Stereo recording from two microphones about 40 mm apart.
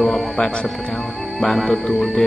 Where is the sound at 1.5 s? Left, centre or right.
Centre.